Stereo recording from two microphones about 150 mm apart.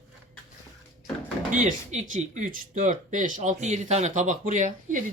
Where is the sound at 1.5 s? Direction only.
60° right (ahead or behind).